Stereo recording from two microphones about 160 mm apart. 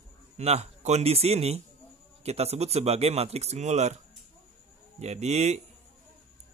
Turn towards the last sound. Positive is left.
turn(degrees=-45)  # may be behind; listen again after turning